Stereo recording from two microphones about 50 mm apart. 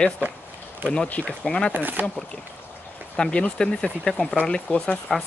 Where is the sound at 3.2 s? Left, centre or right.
Centre.